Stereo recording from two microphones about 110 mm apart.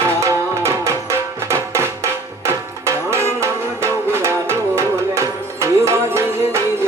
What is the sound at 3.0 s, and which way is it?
Music, 25° right (ahead or behind).